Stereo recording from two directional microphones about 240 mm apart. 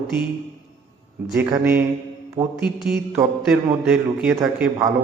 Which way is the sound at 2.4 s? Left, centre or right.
Right.